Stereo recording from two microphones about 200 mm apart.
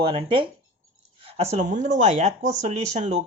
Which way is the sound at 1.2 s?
35° right (ahead or behind).